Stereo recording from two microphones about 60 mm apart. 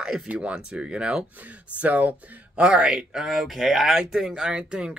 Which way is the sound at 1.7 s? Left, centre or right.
Right.